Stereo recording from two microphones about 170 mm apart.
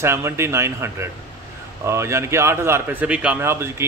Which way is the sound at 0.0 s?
15° right (ahead or behind).